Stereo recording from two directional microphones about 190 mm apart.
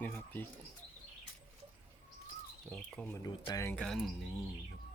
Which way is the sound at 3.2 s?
20° left (ahead or behind).